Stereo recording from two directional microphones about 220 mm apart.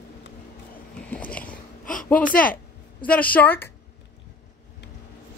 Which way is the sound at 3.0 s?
5° left (ahead or behind).